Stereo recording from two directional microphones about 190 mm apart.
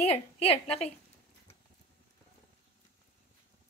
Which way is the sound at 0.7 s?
35° left (ahead or behind).